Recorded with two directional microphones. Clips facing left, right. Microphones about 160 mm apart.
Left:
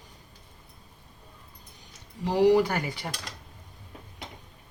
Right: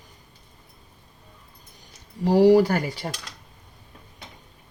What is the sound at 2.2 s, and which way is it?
Speech, 35° right (ahead or behind).